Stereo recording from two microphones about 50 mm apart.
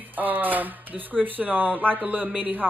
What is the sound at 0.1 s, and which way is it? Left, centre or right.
Speech, right.